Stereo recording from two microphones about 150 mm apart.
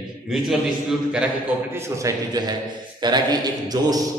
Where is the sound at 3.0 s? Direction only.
30° right (ahead or behind).